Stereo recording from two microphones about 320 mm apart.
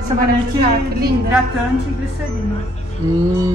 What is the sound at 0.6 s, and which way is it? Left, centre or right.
Speech, right.